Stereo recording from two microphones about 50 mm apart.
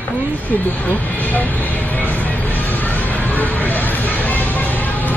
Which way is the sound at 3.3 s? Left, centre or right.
Left.